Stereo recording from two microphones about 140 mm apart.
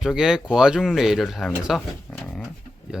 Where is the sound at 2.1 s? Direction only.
5° left (ahead or behind).